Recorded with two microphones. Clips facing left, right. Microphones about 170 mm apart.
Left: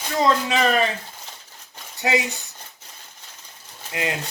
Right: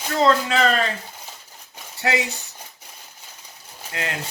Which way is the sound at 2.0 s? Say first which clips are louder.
Left 1 dB; 15° left (ahead or behind).